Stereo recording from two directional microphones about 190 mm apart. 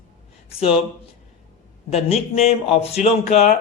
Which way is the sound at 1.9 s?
35° left (ahead or behind).